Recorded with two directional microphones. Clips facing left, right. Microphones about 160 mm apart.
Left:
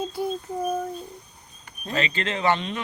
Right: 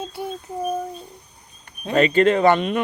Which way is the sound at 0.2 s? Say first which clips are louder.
Right 1 dB; 5° right (ahead or behind).